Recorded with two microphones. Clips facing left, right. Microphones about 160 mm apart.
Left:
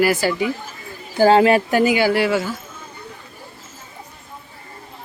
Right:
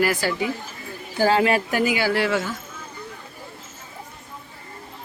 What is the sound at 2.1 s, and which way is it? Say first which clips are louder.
Speech: left 3 dB; 5° left (ahead or behind).